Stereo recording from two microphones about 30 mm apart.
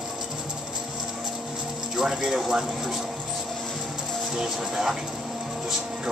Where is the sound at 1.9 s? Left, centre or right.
Centre.